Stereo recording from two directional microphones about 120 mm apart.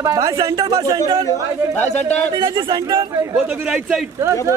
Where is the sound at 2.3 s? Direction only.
45° right (ahead or behind).